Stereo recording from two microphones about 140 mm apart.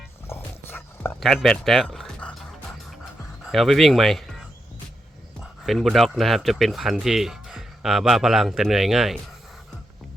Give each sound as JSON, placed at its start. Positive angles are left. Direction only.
{"t": 0.3, "sound": "dog", "side_deg": 15}
{"t": 1.2, "sound": "speech", "side_deg": 0}
{"t": 3.4, "sound": "speech", "side_deg": 0}